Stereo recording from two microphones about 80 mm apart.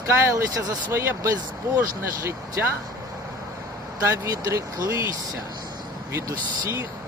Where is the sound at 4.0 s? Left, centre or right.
Right.